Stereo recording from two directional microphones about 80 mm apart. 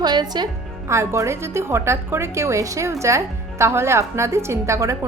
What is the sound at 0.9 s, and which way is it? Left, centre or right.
A woman's voice, right.